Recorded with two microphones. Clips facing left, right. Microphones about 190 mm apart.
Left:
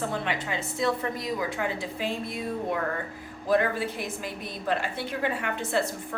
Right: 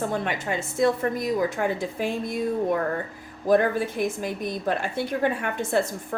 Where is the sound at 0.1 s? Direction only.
45° right (ahead or behind).